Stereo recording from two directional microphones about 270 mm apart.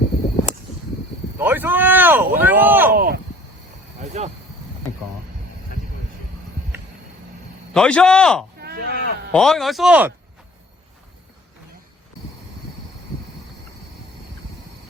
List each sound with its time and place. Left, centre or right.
1.4 s speech: centre
2.9 s speech: right
4.0 s a sound: right
7.7 s speech: centre
8.6 s sheep: right
9.3 s speech: centre